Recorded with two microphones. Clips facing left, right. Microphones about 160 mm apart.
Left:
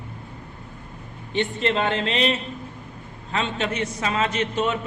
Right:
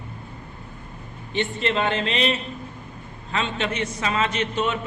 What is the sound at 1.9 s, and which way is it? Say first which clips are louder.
Speech: left 1 dB; 20° right (ahead or behind).